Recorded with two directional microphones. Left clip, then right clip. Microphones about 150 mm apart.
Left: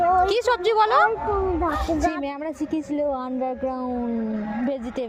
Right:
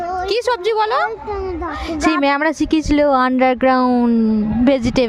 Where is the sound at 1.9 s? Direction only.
90° right.